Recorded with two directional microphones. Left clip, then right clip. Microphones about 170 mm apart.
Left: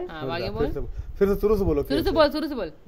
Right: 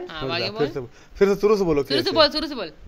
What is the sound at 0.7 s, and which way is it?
A man's voice, 25° right (ahead or behind).